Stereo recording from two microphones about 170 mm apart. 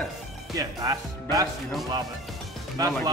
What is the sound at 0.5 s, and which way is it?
Speech, 20° right (ahead or behind).